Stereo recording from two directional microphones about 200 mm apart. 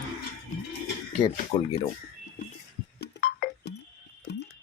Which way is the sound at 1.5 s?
25° left (ahead or behind).